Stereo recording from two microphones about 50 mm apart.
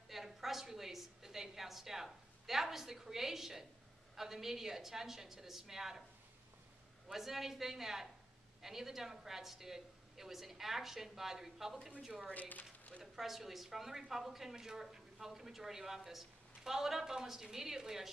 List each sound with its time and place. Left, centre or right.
0.1 s a woman's voice: centre
7.1 s a woman's voice: centre
12.4 s speech: left
13.0 s a woman's voice: centre